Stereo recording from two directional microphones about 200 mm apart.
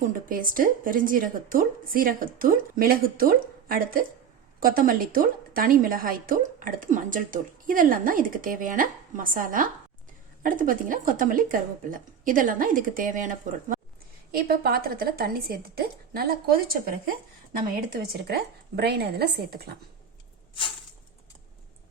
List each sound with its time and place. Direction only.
0.0 s a woman's voice: 45° right (ahead or behind)
18.0 s a woman's voice: 50° right (ahead or behind)
20.5 s a sound: 25° left (ahead or behind)